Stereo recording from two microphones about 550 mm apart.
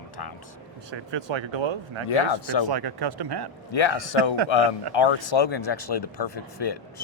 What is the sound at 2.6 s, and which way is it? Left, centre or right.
Speech, right.